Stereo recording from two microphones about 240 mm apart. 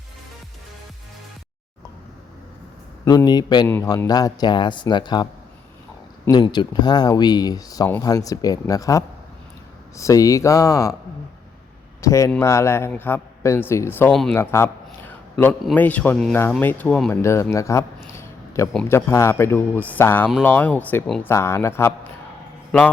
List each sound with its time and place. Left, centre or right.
3.0 s speech: centre
6.3 s speech: centre
12.0 s speech: centre